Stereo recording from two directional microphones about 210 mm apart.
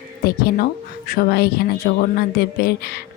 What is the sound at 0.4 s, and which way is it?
Speech, 45° left (ahead or behind).